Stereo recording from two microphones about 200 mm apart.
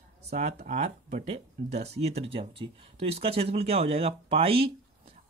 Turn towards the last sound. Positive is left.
turn(degrees=-30)  # may be behind; listen again after turning